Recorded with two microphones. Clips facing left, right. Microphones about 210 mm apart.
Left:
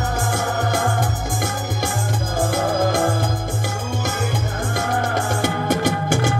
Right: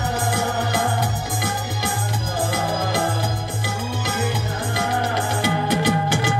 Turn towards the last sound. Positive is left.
turn(degrees=50)  # may be behind; listen again after turning